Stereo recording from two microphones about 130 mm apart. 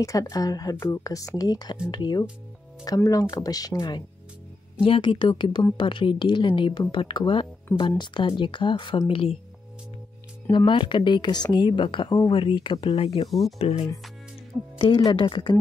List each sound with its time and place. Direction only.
0.0 s speech: 25° left (ahead or behind)
4.8 s speech: 45° left (ahead or behind)
10.5 s speech: 35° left (ahead or behind)
13.3 s speech: centre (ahead or behind)
13.6 s speech: 50° left (ahead or behind)
14.5 s speech: 10° right (ahead or behind)
15.0 s speech: 40° left (ahead or behind)